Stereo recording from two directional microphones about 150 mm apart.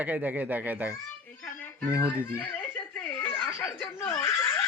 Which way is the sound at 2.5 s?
10° left (ahead or behind).